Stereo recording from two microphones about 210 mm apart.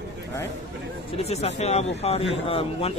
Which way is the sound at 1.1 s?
30° left (ahead or behind).